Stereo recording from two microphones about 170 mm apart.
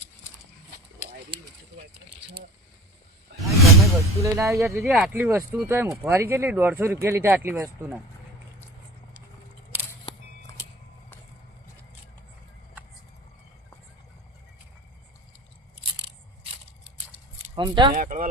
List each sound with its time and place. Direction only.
3.4 s whoosh: centre (ahead or behind)
4.2 s speech: 15° right (ahead or behind)
4.8 s speech: centre (ahead or behind)
17.5 s speech: 30° right (ahead or behind)
17.9 s speech: 50° right (ahead or behind)